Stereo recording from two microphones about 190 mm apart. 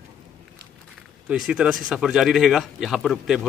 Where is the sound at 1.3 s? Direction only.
5° right (ahead or behind).